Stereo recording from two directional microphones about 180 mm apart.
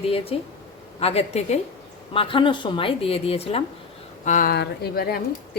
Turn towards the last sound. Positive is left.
turn(degrees=60)  # may be behind; listen again after turning